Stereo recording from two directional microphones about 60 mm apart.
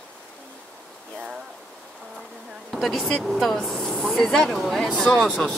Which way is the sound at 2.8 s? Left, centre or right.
Centre.